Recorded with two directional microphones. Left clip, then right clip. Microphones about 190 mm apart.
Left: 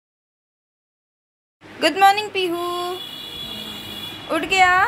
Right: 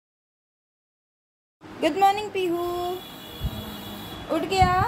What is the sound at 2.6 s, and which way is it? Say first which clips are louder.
Speech: left 3 dB; 20° left (ahead or behind).